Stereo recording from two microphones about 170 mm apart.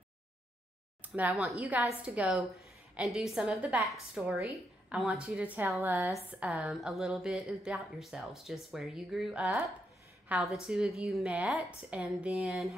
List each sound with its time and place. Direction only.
1.0 s a woman's voice: 10° right (ahead or behind)
5.8 s a woman's voice: 15° right (ahead or behind)